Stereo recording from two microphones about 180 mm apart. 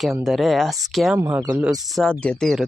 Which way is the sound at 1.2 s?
15° right (ahead or behind).